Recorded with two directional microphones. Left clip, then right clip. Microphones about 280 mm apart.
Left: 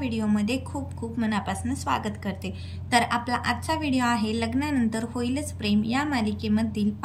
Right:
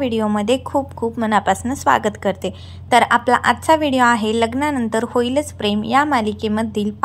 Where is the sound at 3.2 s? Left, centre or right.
Centre.